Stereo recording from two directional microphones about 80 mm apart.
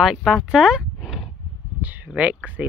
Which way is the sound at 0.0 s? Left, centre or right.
Centre.